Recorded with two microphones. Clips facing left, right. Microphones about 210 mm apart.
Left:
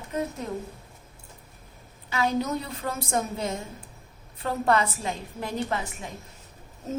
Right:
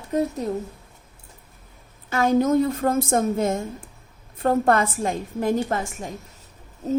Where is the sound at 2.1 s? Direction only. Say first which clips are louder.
Right 8 dB; 50° right (ahead or behind).